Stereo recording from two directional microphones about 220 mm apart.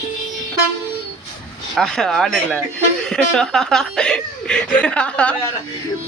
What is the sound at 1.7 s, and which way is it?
Speech, centre (ahead or behind).